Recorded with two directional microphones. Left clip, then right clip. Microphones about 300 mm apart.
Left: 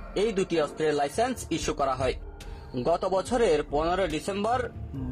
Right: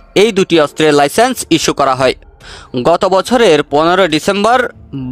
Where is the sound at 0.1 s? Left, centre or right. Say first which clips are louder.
Right 17 dB; right.